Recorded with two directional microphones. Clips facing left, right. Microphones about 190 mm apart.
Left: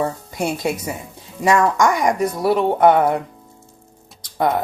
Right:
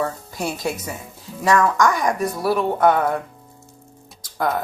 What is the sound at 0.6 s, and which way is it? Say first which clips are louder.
A woman's voice: left 3 dB; 20° left (ahead or behind).